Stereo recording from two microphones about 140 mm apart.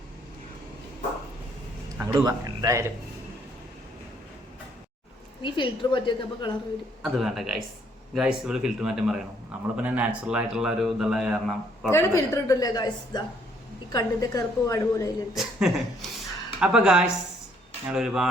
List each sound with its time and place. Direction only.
2.0 s a man's voice: 25° right (ahead or behind)
5.4 s a woman's voice: 35° left (ahead or behind)
7.0 s a man's voice: centre (ahead or behind)
11.9 s a woman's voice: 20° left (ahead or behind)
15.4 s a man's voice: centre (ahead or behind)